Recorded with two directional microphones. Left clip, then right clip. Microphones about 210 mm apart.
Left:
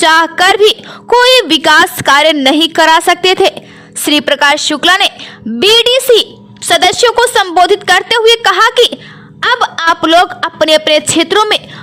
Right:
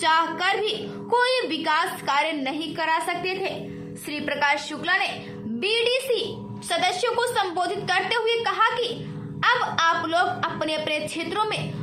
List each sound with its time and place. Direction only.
0.0 s a woman's voice: 55° left (ahead or behind)